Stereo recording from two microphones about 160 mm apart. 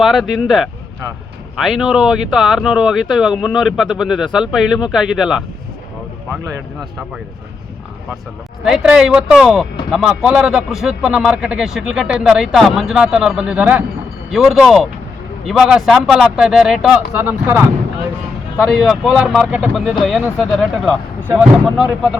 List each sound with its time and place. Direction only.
0.0 s a man's voice: centre (ahead or behind)
8.6 s a man's voice: 5° right (ahead or behind)
18.5 s a man's voice: 5° left (ahead or behind)
21.2 s speech: 10° right (ahead or behind)